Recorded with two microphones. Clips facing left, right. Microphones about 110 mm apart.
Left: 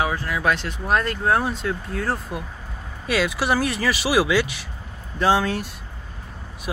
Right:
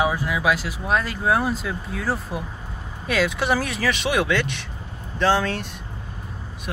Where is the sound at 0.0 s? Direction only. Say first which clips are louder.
Right 1 dB; 15° right (ahead or behind).